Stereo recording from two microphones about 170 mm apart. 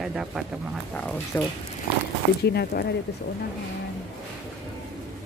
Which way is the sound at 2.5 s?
70° left (ahead or behind).